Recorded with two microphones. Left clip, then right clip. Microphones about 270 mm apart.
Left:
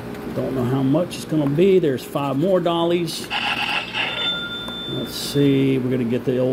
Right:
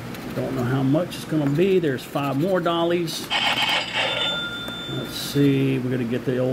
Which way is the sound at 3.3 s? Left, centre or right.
Right.